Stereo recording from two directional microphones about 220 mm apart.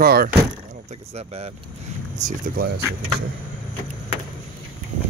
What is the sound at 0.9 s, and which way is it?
Speech, 30° right (ahead or behind).